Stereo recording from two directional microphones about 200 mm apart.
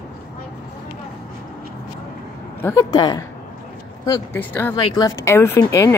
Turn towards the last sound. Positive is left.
turn(degrees=15)  # may be behind; listen again after turning